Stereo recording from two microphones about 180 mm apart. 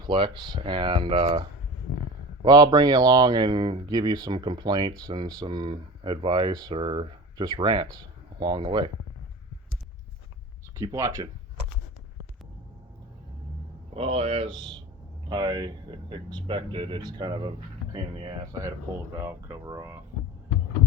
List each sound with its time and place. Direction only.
0.0 s speech: 25° right (ahead or behind)
10.8 s speech: 15° right (ahead or behind)
13.9 s speech: 30° right (ahead or behind)
19.2 s speech: 15° right (ahead or behind)